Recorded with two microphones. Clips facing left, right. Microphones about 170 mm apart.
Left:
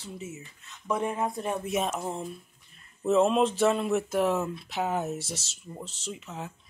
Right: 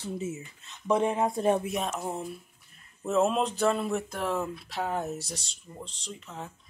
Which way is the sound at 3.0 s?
Centre (ahead or behind).